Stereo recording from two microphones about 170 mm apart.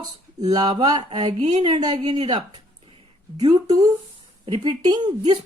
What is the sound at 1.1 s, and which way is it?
Speech, 40° right (ahead or behind).